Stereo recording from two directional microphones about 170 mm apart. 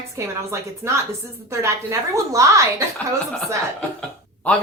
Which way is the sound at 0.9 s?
15° right (ahead or behind).